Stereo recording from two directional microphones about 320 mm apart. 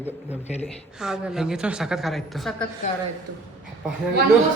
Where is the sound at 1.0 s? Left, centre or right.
Centre.